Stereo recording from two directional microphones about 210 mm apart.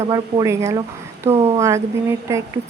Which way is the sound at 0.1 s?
15° right (ahead or behind).